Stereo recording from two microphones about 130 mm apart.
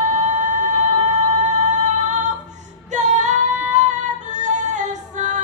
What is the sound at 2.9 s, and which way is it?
Music, 70° right (ahead or behind).